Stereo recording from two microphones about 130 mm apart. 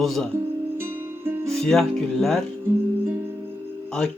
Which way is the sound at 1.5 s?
5° left (ahead or behind).